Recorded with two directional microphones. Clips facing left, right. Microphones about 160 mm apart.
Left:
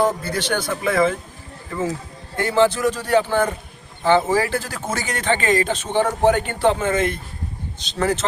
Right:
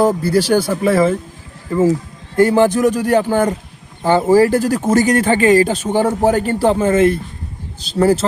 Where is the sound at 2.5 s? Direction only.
15° right (ahead or behind).